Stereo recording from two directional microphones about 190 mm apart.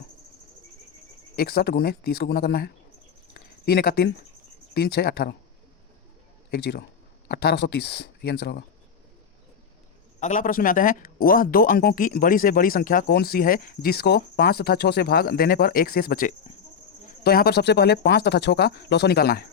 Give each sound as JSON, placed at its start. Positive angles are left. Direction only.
{"t": 1.4, "sound": "speech", "side_deg": 55}
{"t": 3.3, "sound": "a sound", "side_deg": 55}
{"t": 4.7, "sound": "speech", "side_deg": 55}
{"t": 6.5, "sound": "speech", "side_deg": 55}
{"t": 10.2, "sound": "speech", "side_deg": 40}